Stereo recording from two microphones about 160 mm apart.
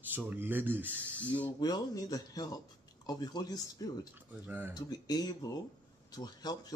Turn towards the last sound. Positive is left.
turn(degrees=25)  # may be behind; listen again after turning